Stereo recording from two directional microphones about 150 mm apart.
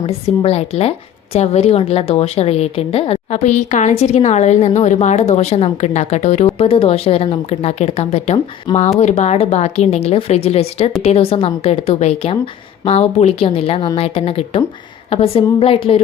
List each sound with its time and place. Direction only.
0.0 s a woman's voice: 40° left (ahead or behind)